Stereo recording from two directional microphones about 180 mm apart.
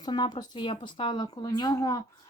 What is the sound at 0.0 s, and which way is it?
A woman's voice, 25° left (ahead or behind).